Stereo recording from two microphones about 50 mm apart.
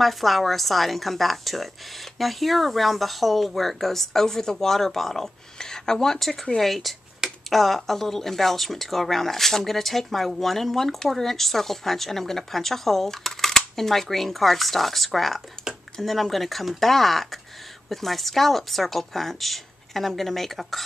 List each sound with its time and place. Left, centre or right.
0.0 s speech: centre